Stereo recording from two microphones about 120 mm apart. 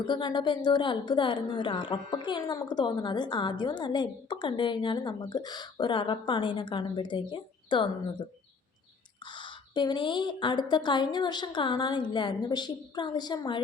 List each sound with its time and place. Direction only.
0.1 s a woman's voice: 40° left (ahead or behind)
9.2 s a woman's voice: 40° left (ahead or behind)